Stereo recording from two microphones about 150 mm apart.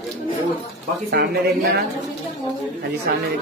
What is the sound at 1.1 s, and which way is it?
Speech, 90° right.